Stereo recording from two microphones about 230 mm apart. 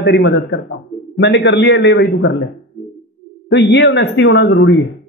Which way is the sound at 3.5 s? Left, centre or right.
Left.